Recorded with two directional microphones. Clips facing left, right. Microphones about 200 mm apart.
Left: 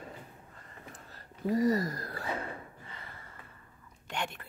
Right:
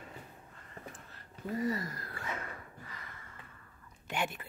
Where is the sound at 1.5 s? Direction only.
40° left (ahead or behind).